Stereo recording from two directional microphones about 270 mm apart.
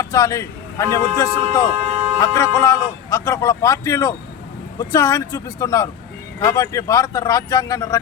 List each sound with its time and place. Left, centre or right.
0.0 s speech: centre
1.7 s speech: right
2.1 s speech: centre